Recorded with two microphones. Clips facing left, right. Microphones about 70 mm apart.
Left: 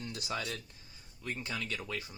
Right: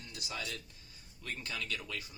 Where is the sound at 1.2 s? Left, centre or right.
Centre.